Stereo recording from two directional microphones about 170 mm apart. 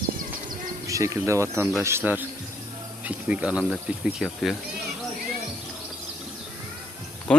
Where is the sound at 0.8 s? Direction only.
20° right (ahead or behind); by 4.5 s centre (ahead or behind).